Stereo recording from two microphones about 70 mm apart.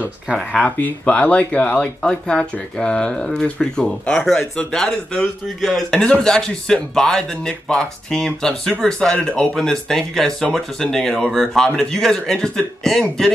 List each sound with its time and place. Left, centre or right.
0.0 s speech: centre
0.7 s speech: left